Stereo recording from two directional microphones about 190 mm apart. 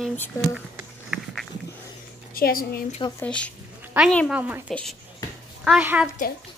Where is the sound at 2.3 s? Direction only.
50° left (ahead or behind).